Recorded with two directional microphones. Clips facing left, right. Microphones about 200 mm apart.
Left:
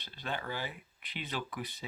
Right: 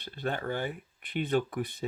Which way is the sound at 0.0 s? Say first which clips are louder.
Right 6 dB; 55° right (ahead or behind).